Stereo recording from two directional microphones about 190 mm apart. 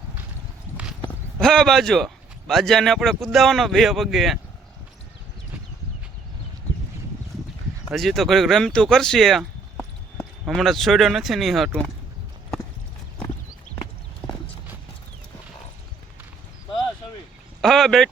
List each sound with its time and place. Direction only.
1.4 s a man's voice: 5° left (ahead or behind)
7.9 s a man's voice: centre (ahead or behind)
17.6 s a sound: centre (ahead or behind)